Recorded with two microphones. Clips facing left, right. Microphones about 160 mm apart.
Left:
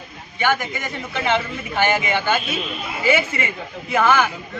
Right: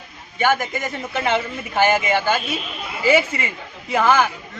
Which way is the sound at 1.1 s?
40° right (ahead or behind).